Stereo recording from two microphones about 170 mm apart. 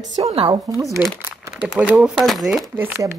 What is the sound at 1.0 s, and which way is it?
A woman's voice, 10° right (ahead or behind).